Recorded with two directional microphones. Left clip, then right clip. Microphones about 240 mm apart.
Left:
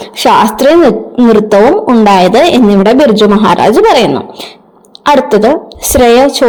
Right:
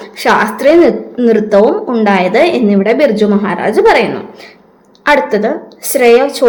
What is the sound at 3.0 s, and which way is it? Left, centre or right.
A woman's voice, left.